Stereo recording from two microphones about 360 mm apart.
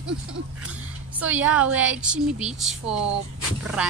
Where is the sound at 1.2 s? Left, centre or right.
Centre.